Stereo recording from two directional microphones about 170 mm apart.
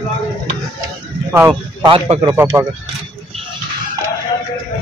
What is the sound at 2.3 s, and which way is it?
Speech, 15° right (ahead or behind).